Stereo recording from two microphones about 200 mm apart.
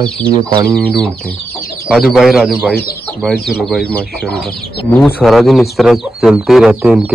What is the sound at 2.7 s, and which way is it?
Speech, 50° left (ahead or behind).